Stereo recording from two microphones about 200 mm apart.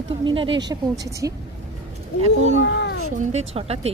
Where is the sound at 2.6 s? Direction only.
60° left (ahead or behind).